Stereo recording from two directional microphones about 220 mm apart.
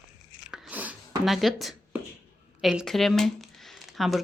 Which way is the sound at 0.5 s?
5° right (ahead or behind).